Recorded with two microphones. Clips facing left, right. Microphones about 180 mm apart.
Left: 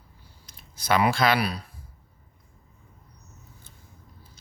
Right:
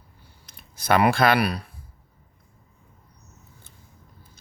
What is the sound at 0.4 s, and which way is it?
Speech, 55° right (ahead or behind).